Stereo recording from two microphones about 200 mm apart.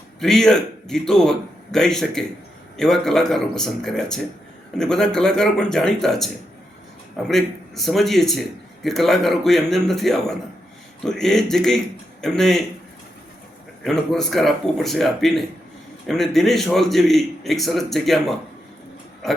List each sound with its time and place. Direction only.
0.2 s a man's voice: centre (ahead or behind)
13.8 s a man's voice: centre (ahead or behind)